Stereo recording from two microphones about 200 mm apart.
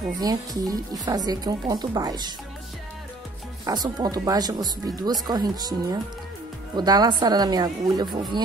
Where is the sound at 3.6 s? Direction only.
20° right (ahead or behind).